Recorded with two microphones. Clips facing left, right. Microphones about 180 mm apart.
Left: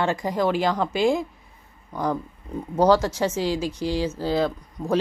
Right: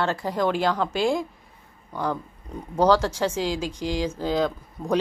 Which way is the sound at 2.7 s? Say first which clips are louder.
Left 1 dB; 10° left (ahead or behind).